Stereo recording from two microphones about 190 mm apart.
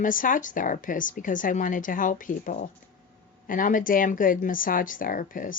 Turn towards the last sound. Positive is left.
turn(degrees=45)  # may be behind; listen again after turning